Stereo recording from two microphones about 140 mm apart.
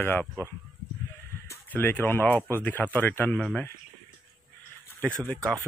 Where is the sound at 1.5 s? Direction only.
15° left (ahead or behind).